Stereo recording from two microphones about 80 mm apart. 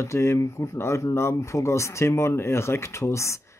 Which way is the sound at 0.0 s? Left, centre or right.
Left.